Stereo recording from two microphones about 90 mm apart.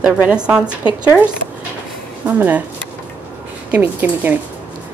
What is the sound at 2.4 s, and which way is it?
Speech, 15° right (ahead or behind).